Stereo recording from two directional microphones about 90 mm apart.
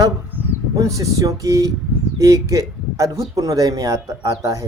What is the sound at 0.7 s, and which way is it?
Speech, 35° right (ahead or behind).